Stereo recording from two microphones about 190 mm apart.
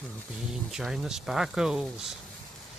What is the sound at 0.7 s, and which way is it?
Speech, centre (ahead or behind).